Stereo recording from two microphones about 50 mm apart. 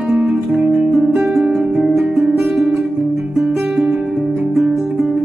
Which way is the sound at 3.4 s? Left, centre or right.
Centre.